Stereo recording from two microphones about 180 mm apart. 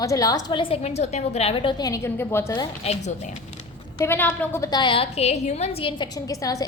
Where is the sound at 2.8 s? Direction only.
40° left (ahead or behind).